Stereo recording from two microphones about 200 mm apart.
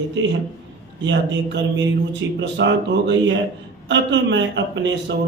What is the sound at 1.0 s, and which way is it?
Speech, 65° right (ahead or behind).